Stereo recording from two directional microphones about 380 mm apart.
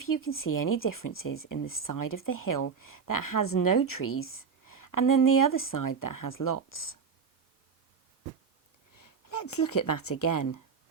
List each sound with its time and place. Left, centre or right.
0.0 s speech: left
1.5 s speech: left
1.8 s speech: left
9.4 s speech: left